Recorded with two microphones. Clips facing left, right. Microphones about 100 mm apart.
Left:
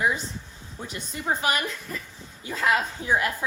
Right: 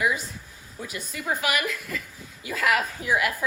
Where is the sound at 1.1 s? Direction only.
30° left (ahead or behind).